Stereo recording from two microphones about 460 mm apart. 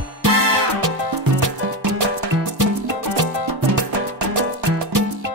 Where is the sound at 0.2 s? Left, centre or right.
Right.